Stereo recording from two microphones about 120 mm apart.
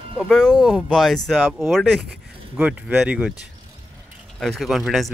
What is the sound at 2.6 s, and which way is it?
Speech, 10° right (ahead or behind).